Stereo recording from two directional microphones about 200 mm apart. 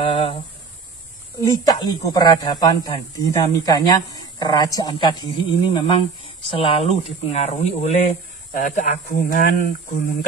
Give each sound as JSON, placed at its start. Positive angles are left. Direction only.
{"t": 0.0, "sound": "speech", "side_deg": 25}
{"t": 1.6, "sound": "speech", "side_deg": 20}